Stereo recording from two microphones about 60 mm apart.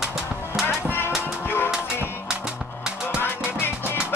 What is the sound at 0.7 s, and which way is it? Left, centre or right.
Music, left.